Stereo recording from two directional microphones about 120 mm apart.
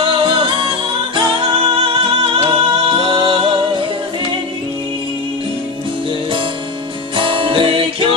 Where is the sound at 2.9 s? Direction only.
45° right (ahead or behind).